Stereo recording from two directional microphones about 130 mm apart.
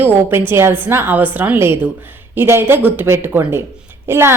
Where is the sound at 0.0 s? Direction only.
15° right (ahead or behind).